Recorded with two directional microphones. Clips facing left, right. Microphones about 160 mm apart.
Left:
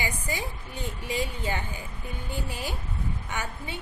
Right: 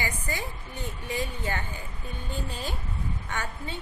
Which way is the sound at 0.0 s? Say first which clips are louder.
Left 1 dB; 15° left (ahead or behind).